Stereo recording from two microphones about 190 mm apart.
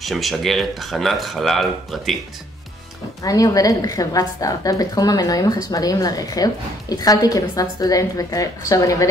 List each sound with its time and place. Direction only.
0.0 s speech: centre (ahead or behind)
3.3 s a woman's voice: 20° left (ahead or behind)